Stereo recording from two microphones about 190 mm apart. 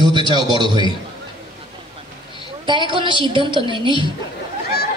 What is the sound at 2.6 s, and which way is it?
A woman's voice, 25° right (ahead or behind).